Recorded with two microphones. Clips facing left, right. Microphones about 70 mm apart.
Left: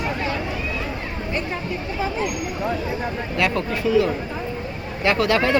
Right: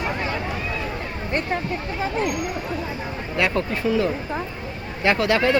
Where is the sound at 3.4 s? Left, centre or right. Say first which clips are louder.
Right 1 dB; right.